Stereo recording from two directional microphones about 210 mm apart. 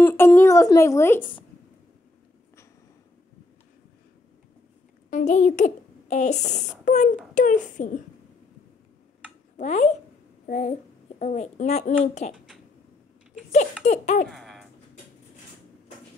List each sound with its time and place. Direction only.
0.0 s speech: 10° left (ahead or behind)
5.1 s a child's voice: 35° left (ahead or behind)
9.6 s a child's voice: 35° left (ahead or behind)
13.8 s speech: 35° left (ahead or behind)
14.3 s a sound: centre (ahead or behind)